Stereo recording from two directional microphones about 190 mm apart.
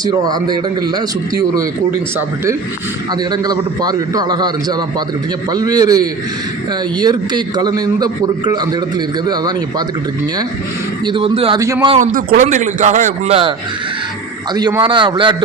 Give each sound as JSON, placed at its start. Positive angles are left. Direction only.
{"t": 0.0, "sound": "a man's voice", "side_deg": -20}
{"t": 11.0, "sound": "a man's voice", "side_deg": -25}
{"t": 11.6, "sound": "speech", "side_deg": -15}
{"t": 11.9, "sound": "speech", "side_deg": -45}
{"t": 14.5, "sound": "a man's voice", "side_deg": -20}